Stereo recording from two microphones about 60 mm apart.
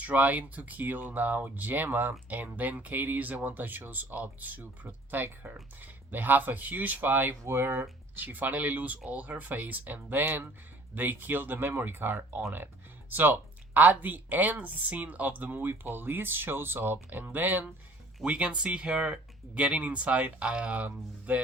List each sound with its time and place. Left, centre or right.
0.0 s speech: right
18.3 s speech: centre